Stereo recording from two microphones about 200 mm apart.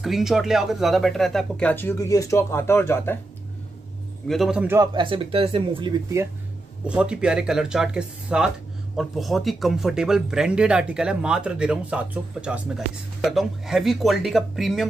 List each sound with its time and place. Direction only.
0.0 s speech: centre (ahead or behind)
4.3 s speech: centre (ahead or behind)
4.9 s speech: 25° right (ahead or behind)
6.9 s speech: 5° right (ahead or behind)